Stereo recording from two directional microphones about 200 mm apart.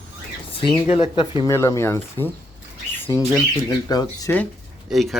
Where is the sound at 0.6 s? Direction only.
25° left (ahead or behind).